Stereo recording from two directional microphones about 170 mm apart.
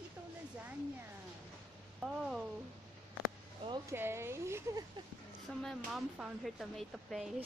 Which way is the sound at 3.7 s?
15° right (ahead or behind).